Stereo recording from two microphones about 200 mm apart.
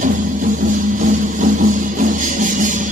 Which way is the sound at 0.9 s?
40° right (ahead or behind).